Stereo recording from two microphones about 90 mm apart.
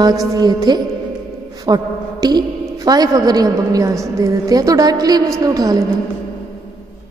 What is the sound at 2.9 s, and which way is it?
A woman's voice, 45° right (ahead or behind).